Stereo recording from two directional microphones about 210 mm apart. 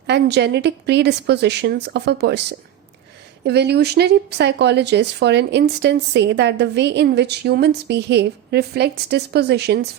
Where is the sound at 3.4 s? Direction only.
50° right (ahead or behind).